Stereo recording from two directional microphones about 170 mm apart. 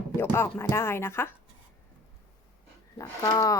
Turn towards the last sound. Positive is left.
turn(degrees=20)  # may be behind; listen again after turning